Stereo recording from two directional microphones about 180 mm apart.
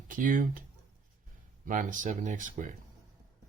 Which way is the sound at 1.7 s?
45° right (ahead or behind).